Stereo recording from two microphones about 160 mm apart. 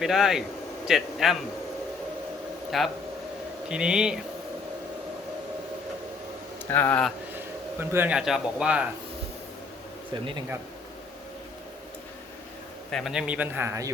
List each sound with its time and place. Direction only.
0.0 s a man's voice: 5° right (ahead or behind)
2.6 s a man's voice: centre (ahead or behind)
6.7 s speech: 10° left (ahead or behind)
7.3 s speech: 15° right (ahead or behind)
12.9 s a man's voice: centre (ahead or behind); by 13.9 s 20° right (ahead or behind)